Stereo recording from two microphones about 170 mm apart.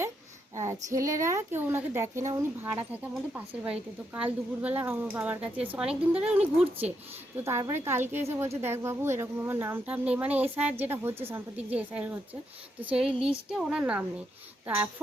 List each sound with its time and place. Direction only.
0.5 s a woman's voice: 15° right (ahead or behind)